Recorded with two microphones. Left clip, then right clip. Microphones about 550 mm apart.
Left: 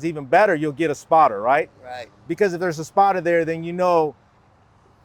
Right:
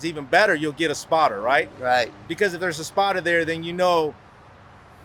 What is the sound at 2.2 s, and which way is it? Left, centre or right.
A man's voice, left.